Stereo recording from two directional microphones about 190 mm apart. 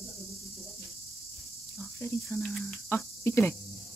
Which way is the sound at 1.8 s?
15° left (ahead or behind).